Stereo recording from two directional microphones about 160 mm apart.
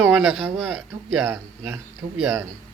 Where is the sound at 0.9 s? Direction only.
20° right (ahead or behind).